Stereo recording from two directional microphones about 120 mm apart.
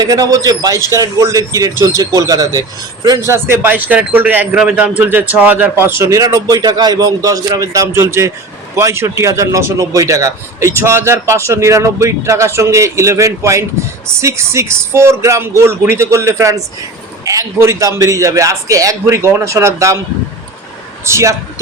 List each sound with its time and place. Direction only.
0.0 s a man's voice: 30° right (ahead or behind)
21.0 s a man's voice: 25° right (ahead or behind)